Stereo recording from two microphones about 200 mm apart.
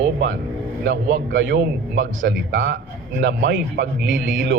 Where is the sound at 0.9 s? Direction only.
65° right (ahead or behind).